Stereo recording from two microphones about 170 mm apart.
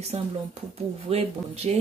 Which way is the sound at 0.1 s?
40° right (ahead or behind).